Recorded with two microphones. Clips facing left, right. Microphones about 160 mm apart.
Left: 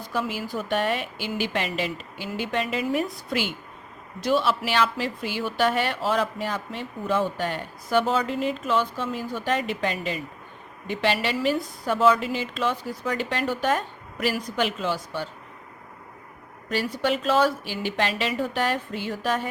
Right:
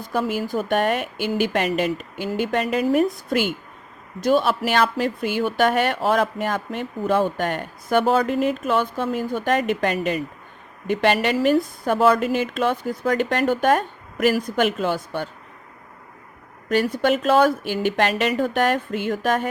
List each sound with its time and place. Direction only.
0.1 s a woman's voice: 45° right (ahead or behind)
16.6 s a woman's voice: 55° right (ahead or behind)